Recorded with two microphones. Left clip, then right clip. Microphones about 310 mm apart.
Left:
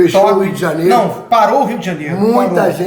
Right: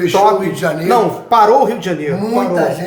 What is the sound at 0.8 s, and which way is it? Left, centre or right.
Speech, centre.